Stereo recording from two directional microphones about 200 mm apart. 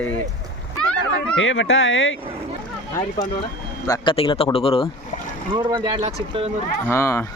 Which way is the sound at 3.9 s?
25° left (ahead or behind).